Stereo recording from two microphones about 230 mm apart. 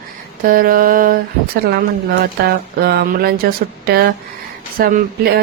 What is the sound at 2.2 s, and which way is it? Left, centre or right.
A woman's voice, right.